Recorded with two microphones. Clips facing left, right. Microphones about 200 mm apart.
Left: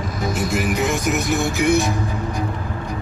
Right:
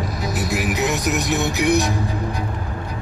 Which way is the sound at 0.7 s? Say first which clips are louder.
Left 1 dB; 50° left (ahead or behind).